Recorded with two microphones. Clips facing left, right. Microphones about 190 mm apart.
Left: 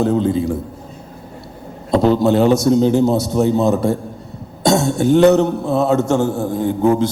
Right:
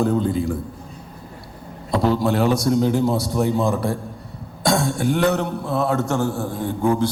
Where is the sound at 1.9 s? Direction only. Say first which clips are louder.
Left 6 dB; 25° left (ahead or behind).